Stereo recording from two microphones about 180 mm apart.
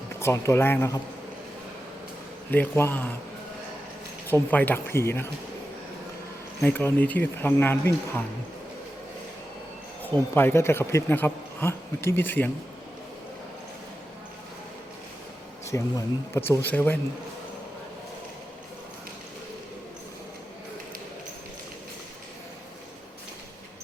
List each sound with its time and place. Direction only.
0.2 s speech: 15° left (ahead or behind)
2.5 s speech: 10° left (ahead or behind)
4.3 s speech: 10° left (ahead or behind)
6.6 s speech: 10° left (ahead or behind)
10.0 s speech: 10° left (ahead or behind)
15.7 s speech: 15° left (ahead or behind)